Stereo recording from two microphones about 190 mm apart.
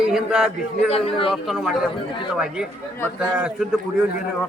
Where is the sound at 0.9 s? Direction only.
30° left (ahead or behind).